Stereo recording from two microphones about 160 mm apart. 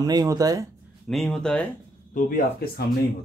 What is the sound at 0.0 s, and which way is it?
Speech, 25° right (ahead or behind).